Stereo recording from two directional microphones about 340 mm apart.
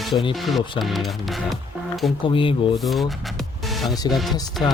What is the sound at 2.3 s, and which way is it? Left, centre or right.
Speech, centre.